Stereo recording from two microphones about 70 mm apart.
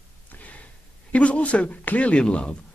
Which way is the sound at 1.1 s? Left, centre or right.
Centre.